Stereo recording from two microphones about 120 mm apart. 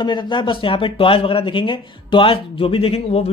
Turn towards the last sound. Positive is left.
turn(degrees=60)  # may be behind; listen again after turning